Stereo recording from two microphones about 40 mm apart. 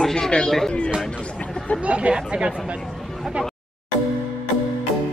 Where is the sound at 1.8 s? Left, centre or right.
Right.